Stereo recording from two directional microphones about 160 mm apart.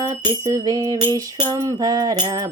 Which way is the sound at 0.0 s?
25° right (ahead or behind).